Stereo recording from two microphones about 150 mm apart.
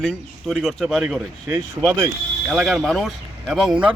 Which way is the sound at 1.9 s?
20° right (ahead or behind).